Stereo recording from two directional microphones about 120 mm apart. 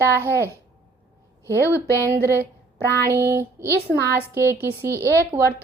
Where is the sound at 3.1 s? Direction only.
25° right (ahead or behind).